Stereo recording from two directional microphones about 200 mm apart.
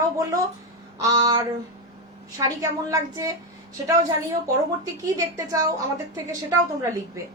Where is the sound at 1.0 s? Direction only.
15° right (ahead or behind).